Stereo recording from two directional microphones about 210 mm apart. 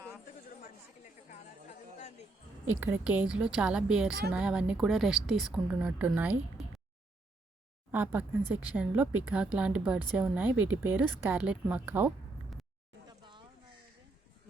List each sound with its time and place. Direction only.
2.8 s a woman's voice: 5° right (ahead or behind)
7.9 s speech: 10° right (ahead or behind)
13.1 s a sound: 20° right (ahead or behind)